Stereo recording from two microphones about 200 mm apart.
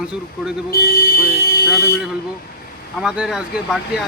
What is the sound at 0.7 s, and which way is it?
Speech, 50° left (ahead or behind).